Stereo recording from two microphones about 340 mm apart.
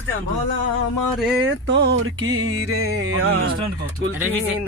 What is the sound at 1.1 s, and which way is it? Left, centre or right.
Speech, centre.